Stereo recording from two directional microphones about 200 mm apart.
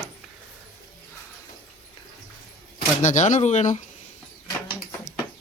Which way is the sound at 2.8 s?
35° left (ahead or behind).